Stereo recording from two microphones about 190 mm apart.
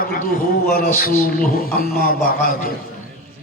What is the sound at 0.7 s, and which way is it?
Mantra, 50° left (ahead or behind).